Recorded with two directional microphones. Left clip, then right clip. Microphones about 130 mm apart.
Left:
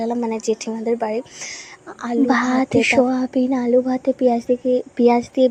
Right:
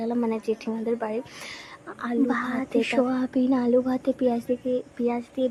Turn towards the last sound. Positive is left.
turn(degrees=45)  # may be behind; listen again after turning